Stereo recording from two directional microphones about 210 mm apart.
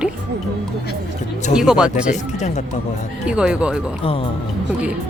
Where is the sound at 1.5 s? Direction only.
5° right (ahead or behind).